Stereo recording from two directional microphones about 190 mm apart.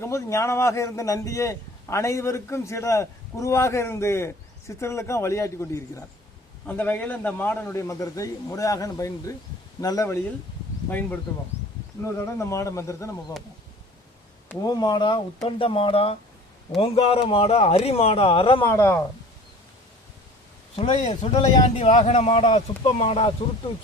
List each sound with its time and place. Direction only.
0.0 s a man's voice: 15° left (ahead or behind)
14.6 s speech: 20° left (ahead or behind)
18.6 s a man's voice: 15° left (ahead or behind)
20.7 s speech: 30° left (ahead or behind)